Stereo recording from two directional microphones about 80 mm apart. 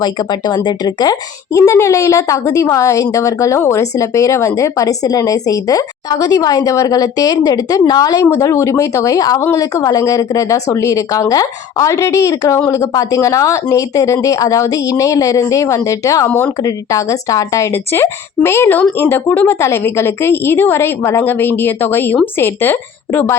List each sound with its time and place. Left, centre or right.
0.0 s speech: left
1.5 s a woman's voice: left
8.2 s a woman's voice: left
9.4 s a woman's voice: left
9.7 s speech: left
16.2 s a woman's voice: left
16.6 s speech: left
17.7 s a woman's voice: left